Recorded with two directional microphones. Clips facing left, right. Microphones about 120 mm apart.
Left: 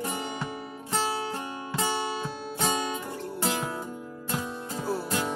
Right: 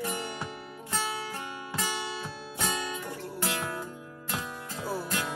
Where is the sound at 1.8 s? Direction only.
25° left (ahead or behind).